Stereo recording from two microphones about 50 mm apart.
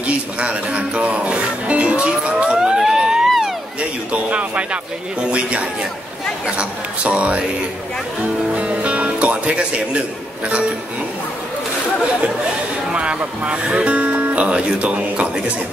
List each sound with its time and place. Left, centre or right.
0.0 s speech: right
2.5 s a sound: centre
4.1 s speech: right
8.5 s speech: right
12.9 s speech: centre